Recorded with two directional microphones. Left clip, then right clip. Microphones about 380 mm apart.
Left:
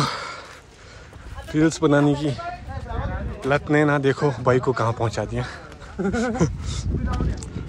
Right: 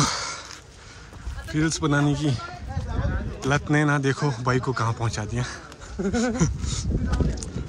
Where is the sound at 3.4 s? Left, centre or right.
Centre.